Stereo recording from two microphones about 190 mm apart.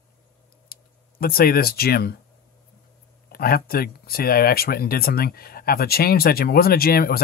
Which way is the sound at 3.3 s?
50° left (ahead or behind).